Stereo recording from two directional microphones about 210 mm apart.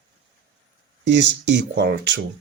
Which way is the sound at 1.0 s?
60° right (ahead or behind).